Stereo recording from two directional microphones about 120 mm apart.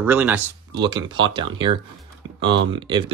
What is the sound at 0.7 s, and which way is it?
Speech, 35° right (ahead or behind).